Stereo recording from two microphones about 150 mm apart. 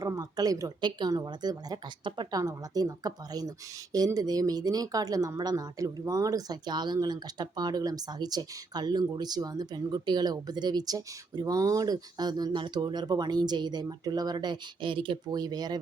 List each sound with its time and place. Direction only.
0.0 s speech: 25° right (ahead or behind)